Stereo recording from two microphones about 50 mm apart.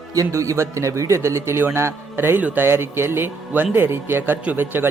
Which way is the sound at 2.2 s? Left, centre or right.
Right.